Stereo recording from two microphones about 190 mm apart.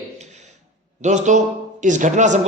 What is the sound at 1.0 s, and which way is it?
A man's voice, 40° right (ahead or behind).